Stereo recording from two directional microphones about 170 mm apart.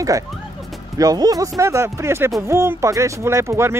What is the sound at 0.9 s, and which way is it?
Speech, 20° right (ahead or behind).